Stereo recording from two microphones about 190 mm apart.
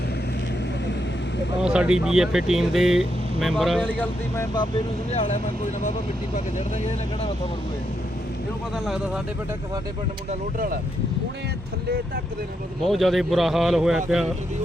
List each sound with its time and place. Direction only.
1.6 s speech: 5° right (ahead or behind)
5.1 s speech: 35° left (ahead or behind)
6.8 s speech: 30° left (ahead or behind)
8.7 s speech: centre (ahead or behind)
12.8 s speech: centre (ahead or behind)